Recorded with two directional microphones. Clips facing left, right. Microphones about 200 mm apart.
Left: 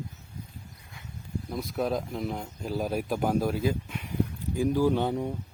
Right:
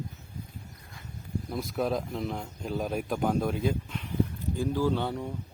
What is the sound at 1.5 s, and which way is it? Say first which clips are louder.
Speech: even; centre (ahead or behind).